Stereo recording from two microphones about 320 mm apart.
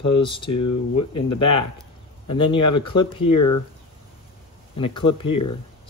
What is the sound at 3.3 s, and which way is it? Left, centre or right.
Speech, left.